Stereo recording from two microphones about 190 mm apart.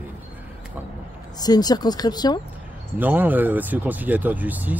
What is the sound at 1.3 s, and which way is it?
Speech, 20° left (ahead or behind).